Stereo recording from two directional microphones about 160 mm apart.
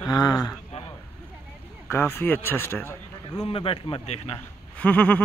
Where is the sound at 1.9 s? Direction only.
15° left (ahead or behind).